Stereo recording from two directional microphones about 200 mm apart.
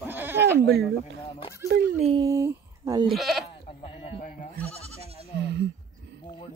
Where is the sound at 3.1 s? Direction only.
Centre (ahead or behind).